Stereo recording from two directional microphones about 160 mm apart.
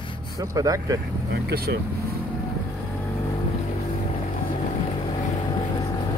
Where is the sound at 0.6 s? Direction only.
20° right (ahead or behind).